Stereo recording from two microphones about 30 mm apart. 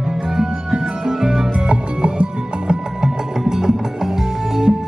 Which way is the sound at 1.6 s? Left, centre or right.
Right.